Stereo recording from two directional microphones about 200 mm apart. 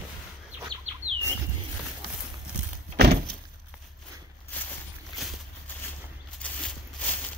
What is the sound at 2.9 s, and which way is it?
Thunk, 55° right (ahead or behind).